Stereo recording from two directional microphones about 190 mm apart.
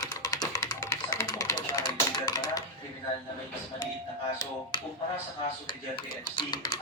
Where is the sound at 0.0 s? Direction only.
20° left (ahead or behind).